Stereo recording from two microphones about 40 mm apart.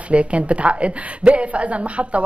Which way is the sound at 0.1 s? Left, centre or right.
Right.